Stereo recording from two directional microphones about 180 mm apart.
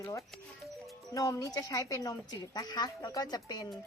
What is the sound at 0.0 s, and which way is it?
A woman's voice, 15° left (ahead or behind).